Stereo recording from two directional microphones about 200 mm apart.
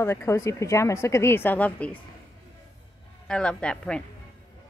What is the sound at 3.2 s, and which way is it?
Speech, 5° left (ahead or behind).